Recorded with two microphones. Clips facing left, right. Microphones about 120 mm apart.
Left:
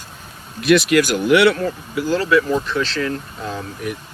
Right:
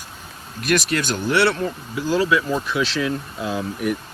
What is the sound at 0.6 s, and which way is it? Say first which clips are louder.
Speech: left 7 dB; 40° right (ahead or behind).